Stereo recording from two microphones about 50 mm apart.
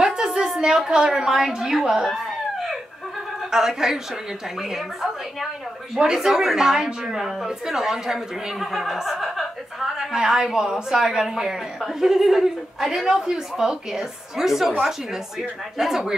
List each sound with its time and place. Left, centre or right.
0.0 s a sound: centre
0.8 s a woman's voice: centre
10.1 s speech: centre